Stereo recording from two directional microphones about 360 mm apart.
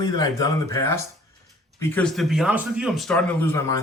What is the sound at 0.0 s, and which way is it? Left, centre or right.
Speech, centre.